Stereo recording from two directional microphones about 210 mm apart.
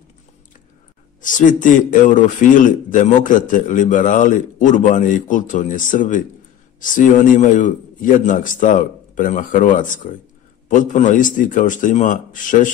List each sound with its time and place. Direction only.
1.2 s a man's voice: 40° left (ahead or behind)